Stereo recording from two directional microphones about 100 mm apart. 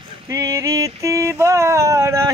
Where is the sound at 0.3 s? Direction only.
30° right (ahead or behind).